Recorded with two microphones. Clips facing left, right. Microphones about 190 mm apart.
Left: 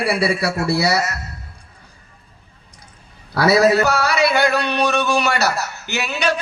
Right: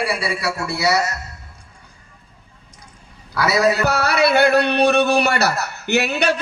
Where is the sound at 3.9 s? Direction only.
60° right (ahead or behind).